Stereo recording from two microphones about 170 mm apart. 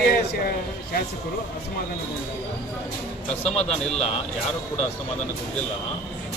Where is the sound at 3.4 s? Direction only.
40° left (ahead or behind).